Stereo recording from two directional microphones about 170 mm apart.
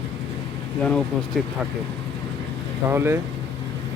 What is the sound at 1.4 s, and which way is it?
Speech, centre (ahead or behind).